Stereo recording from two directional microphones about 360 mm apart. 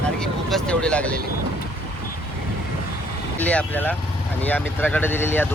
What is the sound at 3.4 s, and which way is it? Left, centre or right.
Speech, centre.